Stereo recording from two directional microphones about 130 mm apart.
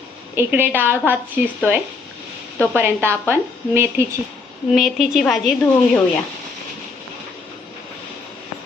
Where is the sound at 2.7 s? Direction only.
15° right (ahead or behind).